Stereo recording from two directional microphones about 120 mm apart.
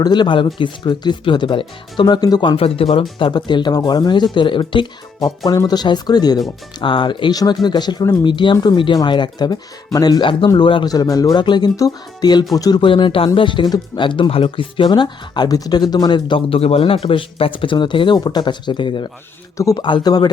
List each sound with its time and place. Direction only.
0.0 s speech: 40° left (ahead or behind)
2.6 s speech: 50° left (ahead or behind); by 12.8 s 30° left (ahead or behind)
12.8 s speech: 45° left (ahead or behind)
19.5 s speech: 30° left (ahead or behind)